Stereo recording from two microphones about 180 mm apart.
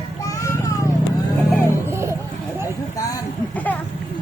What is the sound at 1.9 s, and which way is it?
Vehicle, 15° right (ahead or behind).